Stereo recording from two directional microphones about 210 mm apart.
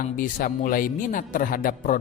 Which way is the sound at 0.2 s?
40° left (ahead or behind).